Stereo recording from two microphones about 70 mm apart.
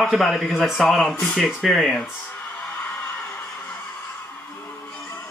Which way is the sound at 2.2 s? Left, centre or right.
Left.